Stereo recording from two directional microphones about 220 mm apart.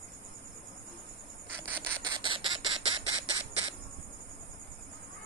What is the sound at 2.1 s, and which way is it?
Squawk, 20° right (ahead or behind).